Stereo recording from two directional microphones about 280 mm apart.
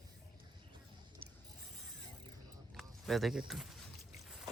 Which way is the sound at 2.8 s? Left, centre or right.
Centre.